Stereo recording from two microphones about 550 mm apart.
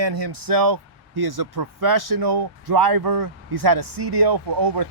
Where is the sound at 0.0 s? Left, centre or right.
Right.